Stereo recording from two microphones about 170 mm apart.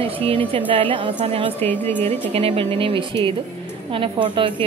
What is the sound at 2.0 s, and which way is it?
Speech, 35° right (ahead or behind).